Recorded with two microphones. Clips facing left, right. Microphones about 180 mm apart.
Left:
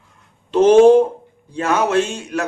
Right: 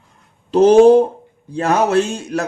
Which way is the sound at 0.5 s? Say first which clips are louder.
Right 1 dB; 40° right (ahead or behind).